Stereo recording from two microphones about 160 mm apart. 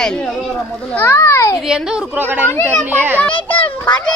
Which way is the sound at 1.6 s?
5° right (ahead or behind).